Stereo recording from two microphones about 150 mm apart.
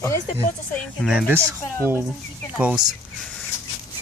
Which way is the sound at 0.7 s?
Centre (ahead or behind).